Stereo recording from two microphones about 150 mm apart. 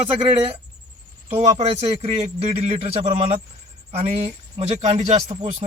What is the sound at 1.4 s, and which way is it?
A man's voice, 50° right (ahead or behind).